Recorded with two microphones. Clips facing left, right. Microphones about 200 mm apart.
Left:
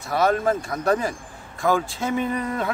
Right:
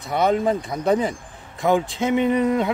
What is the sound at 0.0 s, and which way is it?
A man's voice, 20° right (ahead or behind).